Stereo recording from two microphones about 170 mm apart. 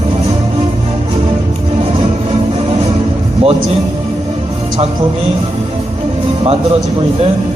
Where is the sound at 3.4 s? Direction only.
35° right (ahead or behind).